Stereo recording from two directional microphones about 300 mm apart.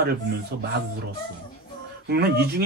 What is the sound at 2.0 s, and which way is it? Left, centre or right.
Speech, right.